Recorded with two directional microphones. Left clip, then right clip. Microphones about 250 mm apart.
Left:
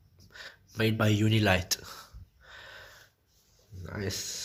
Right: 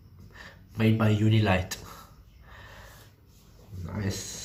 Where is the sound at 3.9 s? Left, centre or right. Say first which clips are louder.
Left 1 dB; left.